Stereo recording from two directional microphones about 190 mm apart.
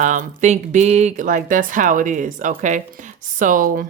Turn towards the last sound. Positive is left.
turn(degrees=-45)  # may be behind; listen again after turning